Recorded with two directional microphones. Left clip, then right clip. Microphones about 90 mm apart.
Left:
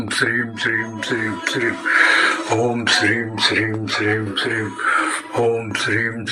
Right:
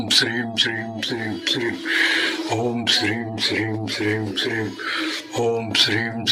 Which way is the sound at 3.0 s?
15° right (ahead or behind).